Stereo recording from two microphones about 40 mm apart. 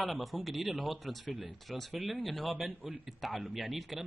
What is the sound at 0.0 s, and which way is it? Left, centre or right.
A man's voice, centre.